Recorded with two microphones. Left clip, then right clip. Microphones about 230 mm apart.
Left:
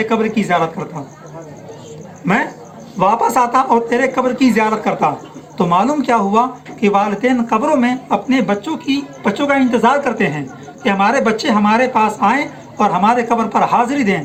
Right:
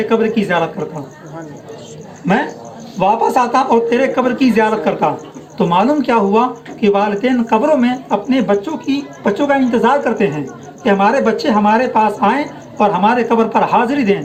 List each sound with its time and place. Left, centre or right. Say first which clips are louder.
0.0 s speech: right 2 dB; left
3.0 s speech: even; left